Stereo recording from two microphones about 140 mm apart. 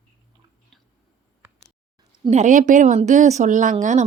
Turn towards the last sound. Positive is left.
turn(degrees=-60)  # may be behind; listen again after turning